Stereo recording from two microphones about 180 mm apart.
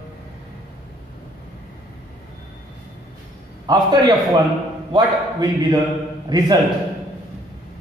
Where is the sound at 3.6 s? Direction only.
25° right (ahead or behind).